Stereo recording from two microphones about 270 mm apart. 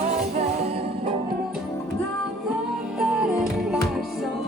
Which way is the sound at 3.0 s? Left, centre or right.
Centre.